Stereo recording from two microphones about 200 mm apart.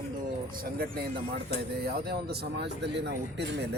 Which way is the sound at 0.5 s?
50° right (ahead or behind).